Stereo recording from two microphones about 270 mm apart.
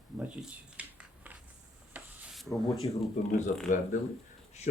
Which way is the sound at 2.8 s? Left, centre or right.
Centre.